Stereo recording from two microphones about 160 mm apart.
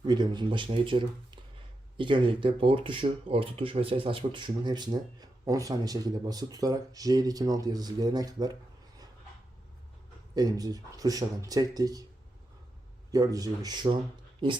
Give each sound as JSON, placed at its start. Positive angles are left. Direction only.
{"t": 0.0, "sound": "speech", "side_deg": -30}
{"t": 10.3, "sound": "speech", "side_deg": -25}
{"t": 13.1, "sound": "speech", "side_deg": -20}